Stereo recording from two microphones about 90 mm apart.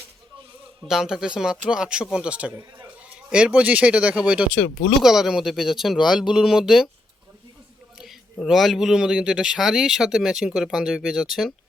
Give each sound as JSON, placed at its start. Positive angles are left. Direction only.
{"t": 0.9, "sound": "speech", "side_deg": -5}
{"t": 2.6, "sound": "a sound", "side_deg": -30}
{"t": 3.2, "sound": "a man's voice", "side_deg": -10}
{"t": 7.9, "sound": "a man's voice", "side_deg": 0}